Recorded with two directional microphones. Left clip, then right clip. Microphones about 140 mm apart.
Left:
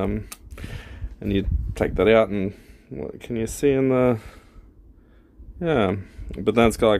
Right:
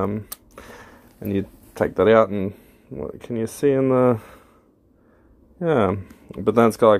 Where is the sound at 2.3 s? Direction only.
15° left (ahead or behind).